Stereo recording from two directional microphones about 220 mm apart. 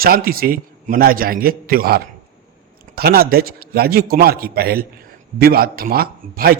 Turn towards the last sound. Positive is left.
turn(degrees=-45)  # may be behind; listen again after turning